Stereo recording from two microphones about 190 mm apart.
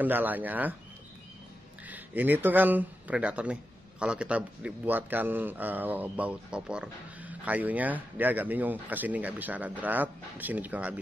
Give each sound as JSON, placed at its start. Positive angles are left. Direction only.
{"t": 0.0, "sound": "a man's voice", "side_deg": -10}
{"t": 1.9, "sound": "a man's voice", "side_deg": -10}